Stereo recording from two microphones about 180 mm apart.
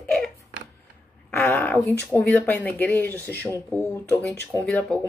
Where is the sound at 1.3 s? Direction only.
10° left (ahead or behind).